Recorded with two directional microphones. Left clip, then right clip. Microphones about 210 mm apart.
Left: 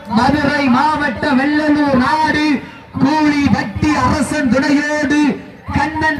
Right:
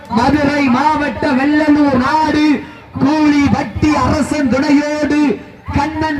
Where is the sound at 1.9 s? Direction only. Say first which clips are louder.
Even; 25° left (ahead or behind).